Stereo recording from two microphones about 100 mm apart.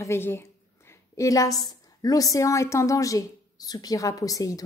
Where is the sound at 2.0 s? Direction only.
35° left (ahead or behind).